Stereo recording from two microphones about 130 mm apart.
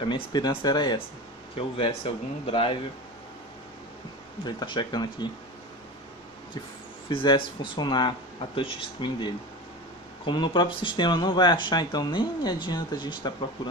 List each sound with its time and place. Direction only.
0.0 s speech: 35° left (ahead or behind)
1.5 s speech: 45° left (ahead or behind)
4.5 s speech: 35° left (ahead or behind)
7.1 s speech: 40° left (ahead or behind)